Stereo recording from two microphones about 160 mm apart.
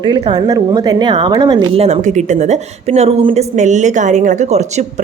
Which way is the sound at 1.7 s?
40° right (ahead or behind).